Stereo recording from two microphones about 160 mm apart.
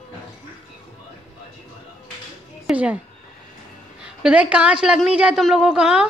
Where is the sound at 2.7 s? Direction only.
5° right (ahead or behind).